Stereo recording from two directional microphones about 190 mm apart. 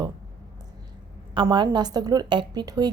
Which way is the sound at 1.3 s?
25° right (ahead or behind).